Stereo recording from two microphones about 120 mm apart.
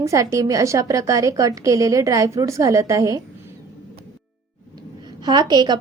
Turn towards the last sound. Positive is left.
turn(degrees=-35)  # may be behind; listen again after turning